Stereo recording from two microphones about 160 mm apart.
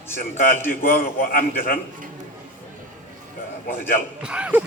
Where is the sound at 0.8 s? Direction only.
65° left (ahead or behind).